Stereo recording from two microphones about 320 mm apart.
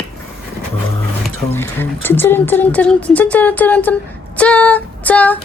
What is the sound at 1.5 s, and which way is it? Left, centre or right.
Speech, centre.